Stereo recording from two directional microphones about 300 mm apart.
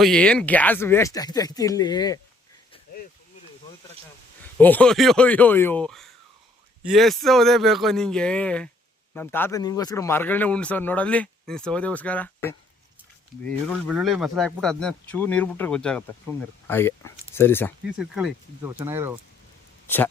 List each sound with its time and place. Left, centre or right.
0.0 s speech: centre
4.5 s speech: centre
13.8 s speech: centre